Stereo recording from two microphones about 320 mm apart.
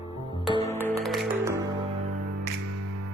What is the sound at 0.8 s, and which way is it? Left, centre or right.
Music, centre.